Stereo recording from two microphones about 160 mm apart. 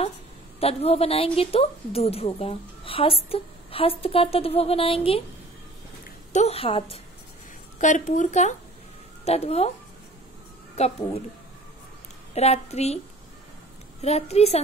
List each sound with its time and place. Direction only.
0.6 s speech: 40° left (ahead or behind)
6.3 s speech: 40° left (ahead or behind)
7.8 s a woman's voice: 50° left (ahead or behind)
10.8 s speech: 40° left (ahead or behind)
12.4 s speech: 40° left (ahead or behind)
14.0 s speech: 40° left (ahead or behind)